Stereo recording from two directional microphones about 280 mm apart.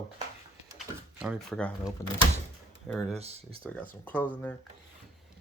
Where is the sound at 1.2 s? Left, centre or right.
Centre.